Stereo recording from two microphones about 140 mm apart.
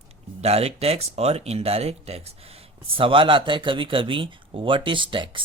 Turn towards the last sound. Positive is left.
turn(degrees=-35)  # may be behind; listen again after turning